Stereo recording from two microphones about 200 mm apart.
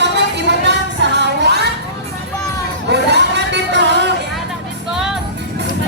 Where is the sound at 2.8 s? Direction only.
60° right (ahead or behind).